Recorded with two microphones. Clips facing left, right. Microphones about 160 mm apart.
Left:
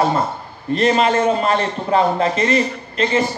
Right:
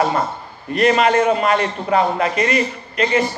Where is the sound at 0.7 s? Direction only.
30° left (ahead or behind).